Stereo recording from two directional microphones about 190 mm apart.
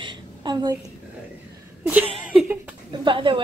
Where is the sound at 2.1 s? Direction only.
10° right (ahead or behind).